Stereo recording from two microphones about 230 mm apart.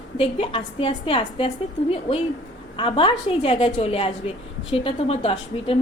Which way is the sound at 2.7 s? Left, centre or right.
Left.